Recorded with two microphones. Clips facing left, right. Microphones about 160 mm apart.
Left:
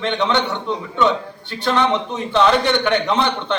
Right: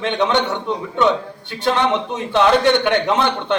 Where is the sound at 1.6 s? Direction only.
15° right (ahead or behind).